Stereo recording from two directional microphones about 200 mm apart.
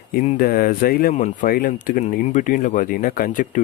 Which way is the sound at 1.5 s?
45° left (ahead or behind).